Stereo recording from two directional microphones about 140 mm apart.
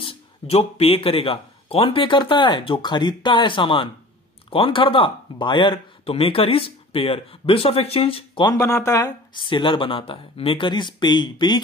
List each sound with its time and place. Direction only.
0.0 s speech: 45° left (ahead or behind)
8.5 s speech: 20° left (ahead or behind)
9.3 s speech: 35° left (ahead or behind)